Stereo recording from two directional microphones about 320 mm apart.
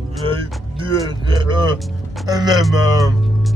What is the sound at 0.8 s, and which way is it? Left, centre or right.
Speech, centre.